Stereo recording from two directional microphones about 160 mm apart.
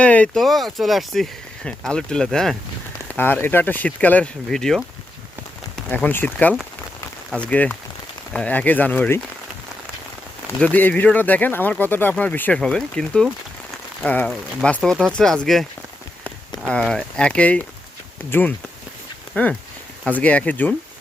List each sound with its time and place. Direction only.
0.0 s speech: 10° left (ahead or behind)
5.9 s speech: 10° left (ahead or behind)
10.6 s speech: 10° left (ahead or behind)
16.6 s speech: 5° left (ahead or behind)